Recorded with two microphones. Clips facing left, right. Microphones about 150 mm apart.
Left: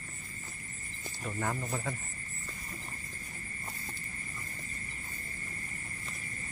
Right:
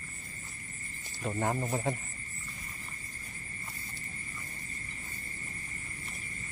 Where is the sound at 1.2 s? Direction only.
30° right (ahead or behind).